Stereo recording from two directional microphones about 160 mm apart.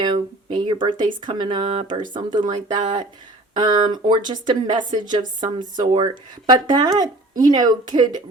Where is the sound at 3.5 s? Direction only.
25° right (ahead or behind).